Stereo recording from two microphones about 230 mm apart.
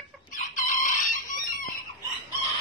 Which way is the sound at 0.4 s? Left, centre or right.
Left.